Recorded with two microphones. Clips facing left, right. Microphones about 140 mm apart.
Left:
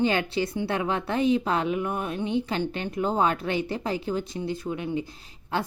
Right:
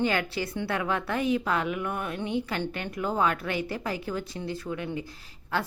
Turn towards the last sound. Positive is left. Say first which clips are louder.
# left 1 dB
turn(degrees=20)  # may be behind; listen again after turning